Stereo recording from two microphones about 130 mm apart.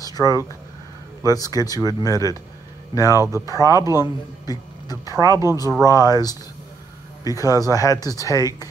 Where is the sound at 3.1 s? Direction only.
20° right (ahead or behind).